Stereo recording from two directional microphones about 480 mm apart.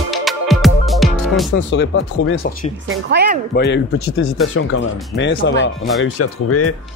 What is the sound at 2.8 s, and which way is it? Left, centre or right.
Speech, centre.